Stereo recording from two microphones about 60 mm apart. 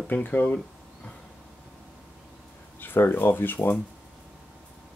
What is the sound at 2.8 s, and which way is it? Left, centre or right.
Speech, left.